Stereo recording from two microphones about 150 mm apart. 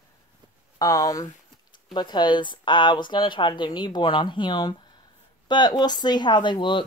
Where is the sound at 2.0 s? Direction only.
30° left (ahead or behind).